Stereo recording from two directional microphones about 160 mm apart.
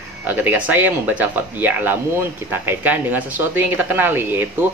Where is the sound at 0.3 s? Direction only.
10° right (ahead or behind).